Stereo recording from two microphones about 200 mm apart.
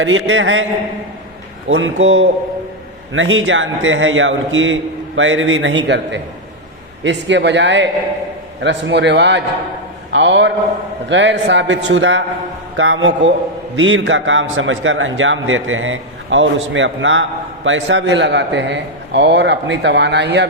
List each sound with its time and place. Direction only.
0.0 s a man's voice: 70° right (ahead or behind)
1.7 s a man's voice: 80° right; by 20.5 s 60° right (ahead or behind)